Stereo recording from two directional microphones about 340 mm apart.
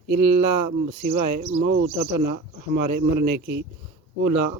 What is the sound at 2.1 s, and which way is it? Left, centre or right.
A man's voice, right.